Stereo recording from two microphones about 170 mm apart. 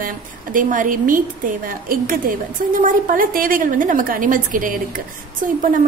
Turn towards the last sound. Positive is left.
turn(degrees=-50)  # may be behind; listen again after turning